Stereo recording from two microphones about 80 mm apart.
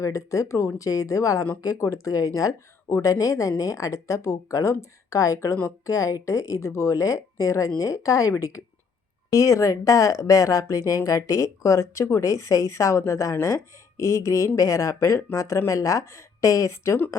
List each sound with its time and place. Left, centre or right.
0.0 s speech: left